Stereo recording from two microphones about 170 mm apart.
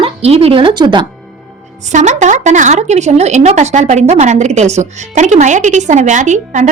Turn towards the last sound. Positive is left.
turn(degrees=-45)  # may be behind; listen again after turning